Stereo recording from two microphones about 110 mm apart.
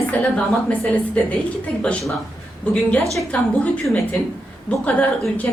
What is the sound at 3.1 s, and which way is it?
A woman's voice, 5° left (ahead or behind).